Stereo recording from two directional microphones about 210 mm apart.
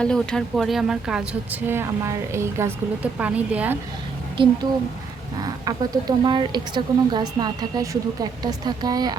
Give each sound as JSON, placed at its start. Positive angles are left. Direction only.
{"t": 0.0, "sound": "speech", "side_deg": 5}
{"t": 4.4, "sound": "a woman's voice", "side_deg": -25}